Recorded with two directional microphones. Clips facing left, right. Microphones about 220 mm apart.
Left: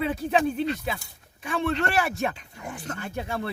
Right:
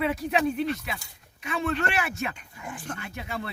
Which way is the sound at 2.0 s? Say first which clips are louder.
Left 4 dB; 35° left (ahead or behind).